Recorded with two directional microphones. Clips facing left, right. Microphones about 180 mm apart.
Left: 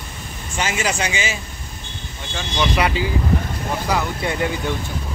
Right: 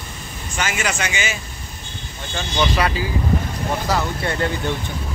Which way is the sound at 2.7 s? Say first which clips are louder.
Left 1 dB; 20° left (ahead or behind).